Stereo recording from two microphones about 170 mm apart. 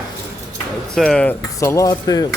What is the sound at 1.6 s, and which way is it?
Speech, 15° left (ahead or behind).